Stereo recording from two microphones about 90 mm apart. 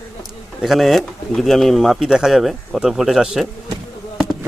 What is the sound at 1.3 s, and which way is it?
Speech, 5° left (ahead or behind).